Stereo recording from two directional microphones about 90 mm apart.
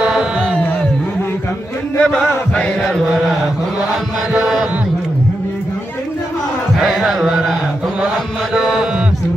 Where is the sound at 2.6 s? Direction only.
5° left (ahead or behind).